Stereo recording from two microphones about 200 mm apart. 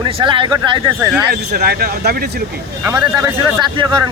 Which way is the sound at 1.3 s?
50° right (ahead or behind).